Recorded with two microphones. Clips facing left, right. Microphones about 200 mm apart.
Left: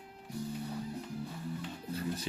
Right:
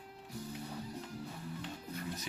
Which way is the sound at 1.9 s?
30° left (ahead or behind).